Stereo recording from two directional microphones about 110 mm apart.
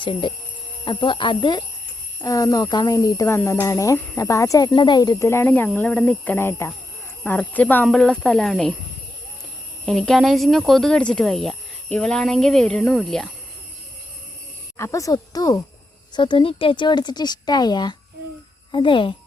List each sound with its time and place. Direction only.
0.0 s speech: 50° left (ahead or behind)
2.2 s speech: 30° left (ahead or behind)
5.2 s speech: 25° left (ahead or behind); by 8.7 s 5° left (ahead or behind)
9.8 s speech: centre (ahead or behind)
14.8 s speech: 25° left (ahead or behind)
16.1 s speech: 45° left (ahead or behind)